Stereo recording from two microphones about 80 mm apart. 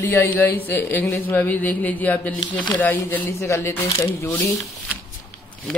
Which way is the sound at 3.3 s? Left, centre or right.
Left.